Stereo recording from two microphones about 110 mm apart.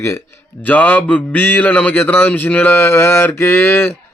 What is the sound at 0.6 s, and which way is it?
A man's voice, 15° left (ahead or behind).